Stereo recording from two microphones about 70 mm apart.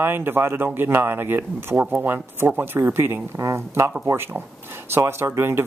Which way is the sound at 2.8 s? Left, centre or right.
Right.